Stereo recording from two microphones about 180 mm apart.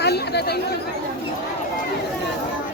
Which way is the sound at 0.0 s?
65° left (ahead or behind).